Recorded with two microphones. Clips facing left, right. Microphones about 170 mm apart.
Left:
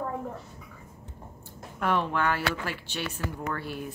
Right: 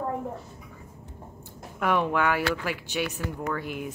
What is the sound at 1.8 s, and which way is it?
A child's voice, 15° right (ahead or behind).